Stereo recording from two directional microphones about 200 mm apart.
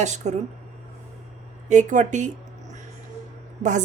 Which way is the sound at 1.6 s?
40° right (ahead or behind).